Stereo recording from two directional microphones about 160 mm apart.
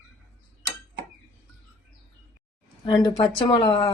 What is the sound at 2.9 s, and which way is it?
Speech, 25° left (ahead or behind).